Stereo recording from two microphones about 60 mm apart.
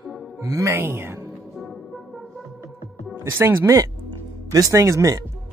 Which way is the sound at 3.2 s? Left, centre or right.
Right.